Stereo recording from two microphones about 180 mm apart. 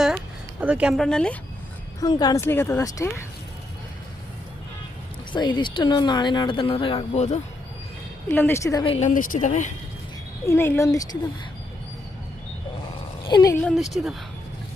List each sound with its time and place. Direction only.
0.6 s speech: 5° right (ahead or behind)
2.0 s speech: 25° left (ahead or behind)
5.3 s speech: 25° left (ahead or behind)
8.3 s a woman's voice: 10° left (ahead or behind); by 9.0 s 30° left (ahead or behind)
9.0 s speech: 45° left (ahead or behind)
10.4 s a woman's voice: 15° left (ahead or behind)
13.2 s speech: 25° left (ahead or behind)
13.7 s speech: centre (ahead or behind)